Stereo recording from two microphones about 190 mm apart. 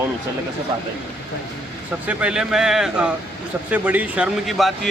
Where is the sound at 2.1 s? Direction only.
5° right (ahead or behind).